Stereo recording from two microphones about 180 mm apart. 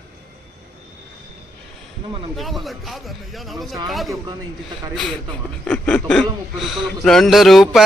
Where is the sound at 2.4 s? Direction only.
Centre (ahead or behind).